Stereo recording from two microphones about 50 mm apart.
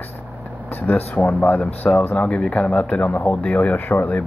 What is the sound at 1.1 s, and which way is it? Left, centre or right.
Speech, left.